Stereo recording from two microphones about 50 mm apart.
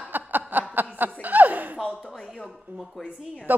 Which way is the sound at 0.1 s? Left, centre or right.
Right.